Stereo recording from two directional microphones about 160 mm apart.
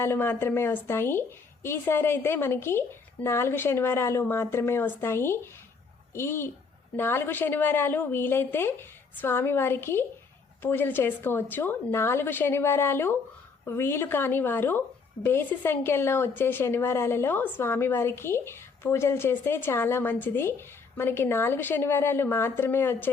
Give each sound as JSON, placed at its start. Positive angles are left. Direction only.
{"t": 0.0, "sound": "a woman's voice", "side_deg": 15}